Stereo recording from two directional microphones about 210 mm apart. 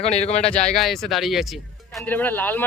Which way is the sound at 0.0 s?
30° left (ahead or behind).